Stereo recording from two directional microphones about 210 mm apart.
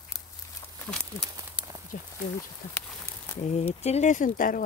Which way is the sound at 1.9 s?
45° left (ahead or behind).